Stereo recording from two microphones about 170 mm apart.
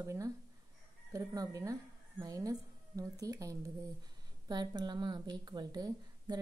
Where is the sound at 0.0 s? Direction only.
15° right (ahead or behind).